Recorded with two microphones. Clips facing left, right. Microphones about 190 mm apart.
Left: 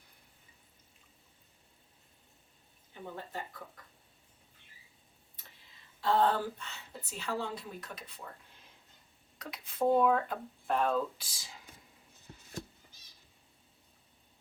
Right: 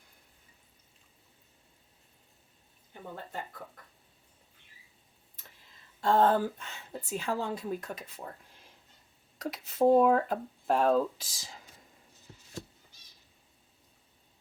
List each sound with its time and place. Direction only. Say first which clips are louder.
6.0 s a woman's voice: right 4 dB; 45° right (ahead or behind)
9.4 s speech: right 6 dB; 40° right (ahead or behind)